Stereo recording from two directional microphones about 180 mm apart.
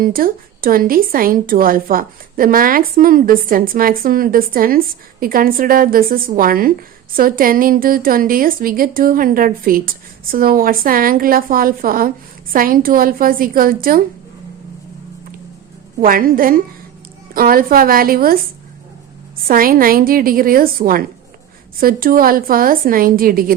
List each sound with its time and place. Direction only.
0.0 s a woman's voice: 55° right (ahead or behind)
16.0 s a woman's voice: 50° right (ahead or behind)
19.5 s a woman's voice: 50° right (ahead or behind)